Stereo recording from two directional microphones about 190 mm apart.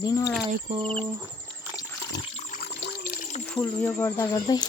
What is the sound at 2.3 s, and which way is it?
Water, 40° left (ahead or behind).